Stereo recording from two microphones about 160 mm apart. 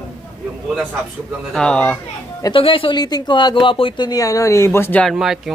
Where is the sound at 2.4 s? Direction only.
30° left (ahead or behind); by 5.5 s centre (ahead or behind).